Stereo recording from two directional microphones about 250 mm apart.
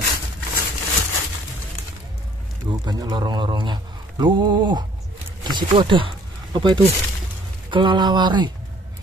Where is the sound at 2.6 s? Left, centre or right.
Centre.